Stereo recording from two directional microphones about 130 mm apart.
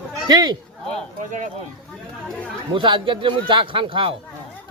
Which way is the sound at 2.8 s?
40° right (ahead or behind).